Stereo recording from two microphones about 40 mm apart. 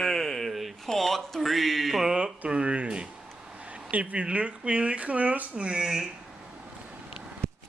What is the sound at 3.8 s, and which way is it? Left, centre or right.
Speech, right.